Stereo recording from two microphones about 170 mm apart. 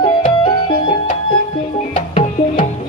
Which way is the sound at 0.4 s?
25° left (ahead or behind).